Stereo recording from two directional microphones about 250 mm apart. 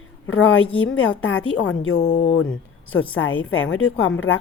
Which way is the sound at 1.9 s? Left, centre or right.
Left.